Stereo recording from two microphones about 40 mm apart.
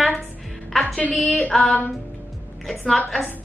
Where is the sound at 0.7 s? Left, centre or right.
Centre.